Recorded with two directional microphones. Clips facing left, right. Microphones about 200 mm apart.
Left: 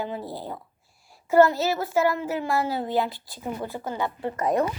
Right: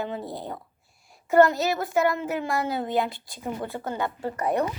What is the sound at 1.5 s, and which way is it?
A woman's voice, 15° right (ahead or behind).